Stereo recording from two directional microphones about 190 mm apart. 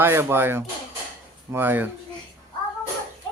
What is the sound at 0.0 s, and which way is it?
Speech, 10° right (ahead or behind).